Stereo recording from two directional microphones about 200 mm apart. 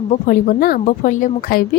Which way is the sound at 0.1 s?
45° left (ahead or behind).